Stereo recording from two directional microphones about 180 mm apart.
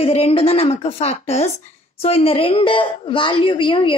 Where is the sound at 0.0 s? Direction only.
35° left (ahead or behind).